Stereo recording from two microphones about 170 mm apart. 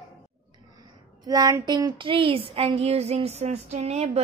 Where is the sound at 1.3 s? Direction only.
20° right (ahead or behind).